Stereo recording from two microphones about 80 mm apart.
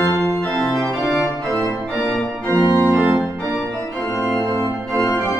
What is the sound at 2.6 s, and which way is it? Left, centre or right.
Organ, right.